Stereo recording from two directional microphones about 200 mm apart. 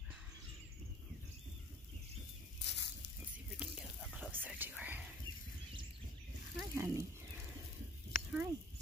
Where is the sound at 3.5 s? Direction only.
5° right (ahead or behind).